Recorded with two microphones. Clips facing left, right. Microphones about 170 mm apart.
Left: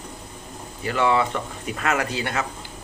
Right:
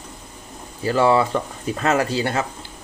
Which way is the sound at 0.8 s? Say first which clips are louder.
Right 4 dB; 35° right (ahead or behind).